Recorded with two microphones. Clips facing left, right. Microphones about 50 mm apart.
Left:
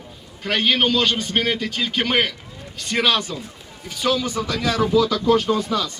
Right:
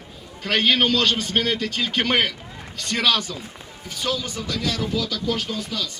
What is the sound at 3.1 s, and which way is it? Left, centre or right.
Speech, left.